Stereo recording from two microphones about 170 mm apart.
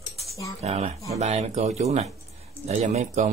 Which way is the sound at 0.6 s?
40° right (ahead or behind).